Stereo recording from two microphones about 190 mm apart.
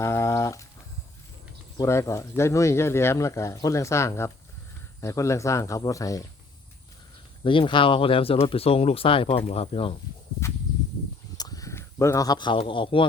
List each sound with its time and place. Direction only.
0.0 s a sound: 15° left (ahead or behind)
1.8 s speech: 15° left (ahead or behind)
7.4 s speech: 25° left (ahead or behind)
11.3 s speech: 20° left (ahead or behind)